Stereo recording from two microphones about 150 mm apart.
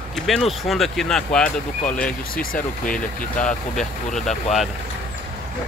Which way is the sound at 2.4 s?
65° left (ahead or behind).